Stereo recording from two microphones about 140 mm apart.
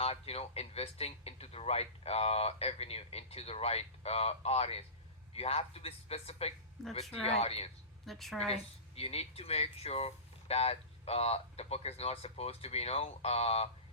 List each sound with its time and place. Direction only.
0.0 s speech: 45° left (ahead or behind)
6.8 s a woman's voice: centre (ahead or behind)
7.3 s speech: 45° left (ahead or behind)
8.0 s a woman's voice: centre (ahead or behind)
8.4 s speech: 45° left (ahead or behind)